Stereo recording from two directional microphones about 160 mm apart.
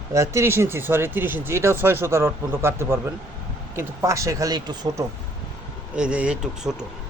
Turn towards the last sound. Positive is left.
turn(degrees=-5)  # may be behind; listen again after turning